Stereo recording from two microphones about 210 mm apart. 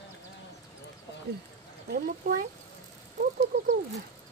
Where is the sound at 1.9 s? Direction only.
45° right (ahead or behind).